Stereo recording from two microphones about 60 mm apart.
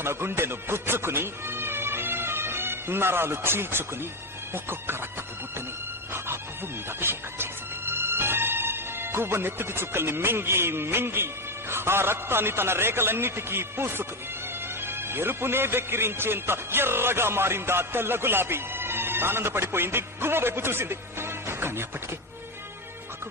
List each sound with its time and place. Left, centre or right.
0.0 s speech: right
6.1 s music: right
7.0 s speech: right